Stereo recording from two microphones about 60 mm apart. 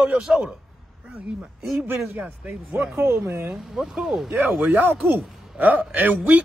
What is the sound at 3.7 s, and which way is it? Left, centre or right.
Speech, centre.